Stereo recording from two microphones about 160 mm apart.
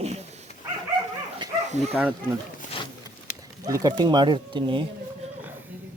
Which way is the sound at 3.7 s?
25° right (ahead or behind).